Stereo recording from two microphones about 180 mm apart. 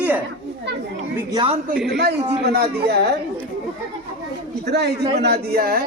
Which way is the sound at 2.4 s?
65° right (ahead or behind).